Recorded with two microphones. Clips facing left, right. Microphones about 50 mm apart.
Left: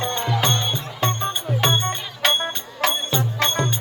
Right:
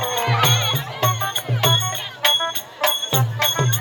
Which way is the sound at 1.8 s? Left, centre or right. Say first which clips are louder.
Even; centre.